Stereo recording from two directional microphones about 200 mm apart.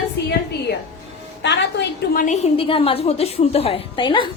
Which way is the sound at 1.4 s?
60° left (ahead or behind).